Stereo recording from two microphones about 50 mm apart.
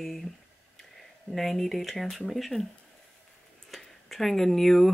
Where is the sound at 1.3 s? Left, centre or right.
Centre.